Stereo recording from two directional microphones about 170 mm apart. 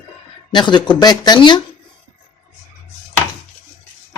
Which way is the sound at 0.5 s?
25° left (ahead or behind).